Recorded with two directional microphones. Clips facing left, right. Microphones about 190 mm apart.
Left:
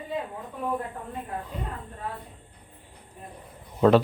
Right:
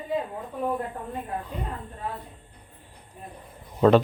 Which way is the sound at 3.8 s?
Centre (ahead or behind).